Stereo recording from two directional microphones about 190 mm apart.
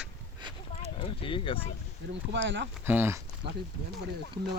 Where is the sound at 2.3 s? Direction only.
65° right (ahead or behind).